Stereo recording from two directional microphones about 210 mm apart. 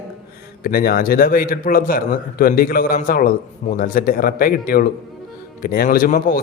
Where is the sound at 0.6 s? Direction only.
45° left (ahead or behind).